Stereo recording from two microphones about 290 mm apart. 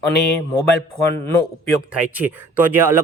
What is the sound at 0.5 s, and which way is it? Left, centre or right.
Speech, centre.